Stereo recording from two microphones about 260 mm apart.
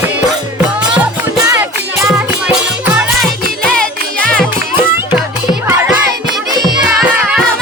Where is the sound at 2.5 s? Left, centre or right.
Centre.